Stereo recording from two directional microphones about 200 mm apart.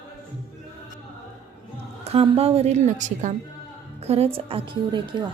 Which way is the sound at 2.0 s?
30° right (ahead or behind).